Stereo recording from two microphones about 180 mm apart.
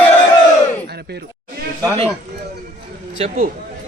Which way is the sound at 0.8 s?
65° right (ahead or behind).